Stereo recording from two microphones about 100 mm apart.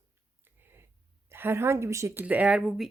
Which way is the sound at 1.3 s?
25° right (ahead or behind).